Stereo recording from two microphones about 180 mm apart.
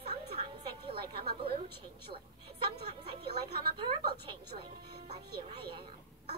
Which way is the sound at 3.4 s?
25° right (ahead or behind).